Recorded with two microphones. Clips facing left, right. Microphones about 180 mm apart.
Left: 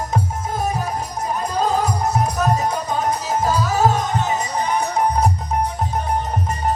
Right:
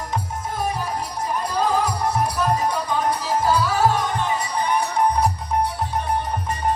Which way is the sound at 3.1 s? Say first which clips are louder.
Even; 45° left (ahead or behind).